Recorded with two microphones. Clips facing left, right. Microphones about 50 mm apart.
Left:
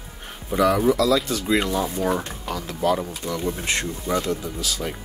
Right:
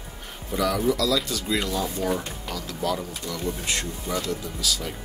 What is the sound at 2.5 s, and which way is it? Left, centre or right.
Speech, left.